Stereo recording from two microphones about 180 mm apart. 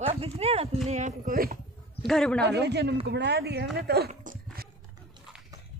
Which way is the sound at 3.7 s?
60° right (ahead or behind).